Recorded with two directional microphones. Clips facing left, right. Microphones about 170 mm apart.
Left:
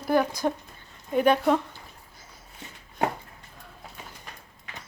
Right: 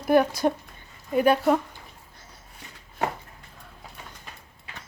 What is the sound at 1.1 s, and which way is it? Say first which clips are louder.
Speech: right 1 dB; 5° right (ahead or behind).